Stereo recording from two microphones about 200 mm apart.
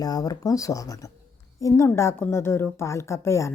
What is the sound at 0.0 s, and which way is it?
A woman's voice, 20° left (ahead or behind).